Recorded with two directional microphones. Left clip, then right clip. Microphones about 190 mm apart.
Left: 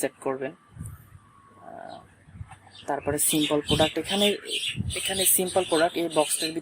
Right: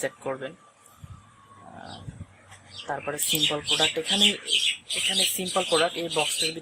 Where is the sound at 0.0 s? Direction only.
40° left (ahead or behind).